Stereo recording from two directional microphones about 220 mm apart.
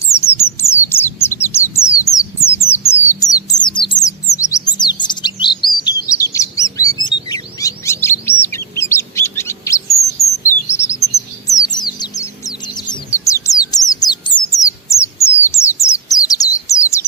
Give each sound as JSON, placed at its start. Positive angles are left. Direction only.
{"t": 0.2, "sound": "bird", "side_deg": 10}
{"t": 1.7, "sound": "a sound", "side_deg": 15}
{"t": 4.3, "sound": "chirp", "side_deg": 15}
{"t": 11.4, "sound": "bird", "side_deg": 15}